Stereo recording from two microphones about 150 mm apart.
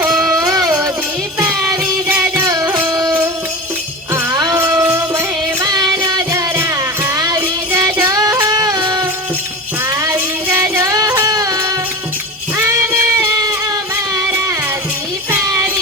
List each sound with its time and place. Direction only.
0.0 s music: 10° right (ahead or behind)
1.8 s music: 10° right (ahead or behind); by 9.0 s 25° right (ahead or behind)
9.9 s music: 15° right (ahead or behind)
12.5 s a sound: 15° right (ahead or behind)
15.3 s child singing: 15° right (ahead or behind)